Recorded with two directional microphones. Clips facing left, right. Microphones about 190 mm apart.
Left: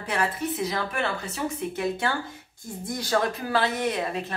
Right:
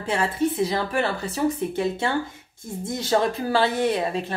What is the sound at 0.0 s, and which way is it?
Speech, 25° right (ahead or behind).